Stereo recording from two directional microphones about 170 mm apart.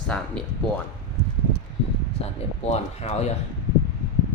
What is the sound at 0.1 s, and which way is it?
Speech, 5° left (ahead or behind).